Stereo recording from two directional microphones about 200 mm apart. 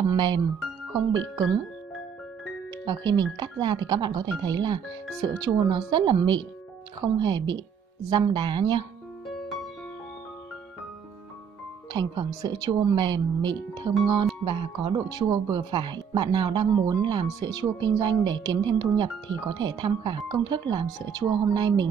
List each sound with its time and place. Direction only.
0.1 s speech: 20° right (ahead or behind)
2.8 s speech: 20° right (ahead or behind)
11.9 s speech: 20° right (ahead or behind)